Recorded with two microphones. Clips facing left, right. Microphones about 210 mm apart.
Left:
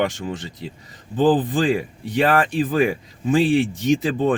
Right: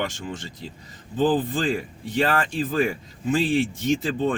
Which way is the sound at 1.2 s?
15° left (ahead or behind).